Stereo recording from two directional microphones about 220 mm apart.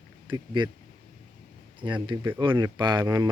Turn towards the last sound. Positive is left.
turn(degrees=-15)  # may be behind; listen again after turning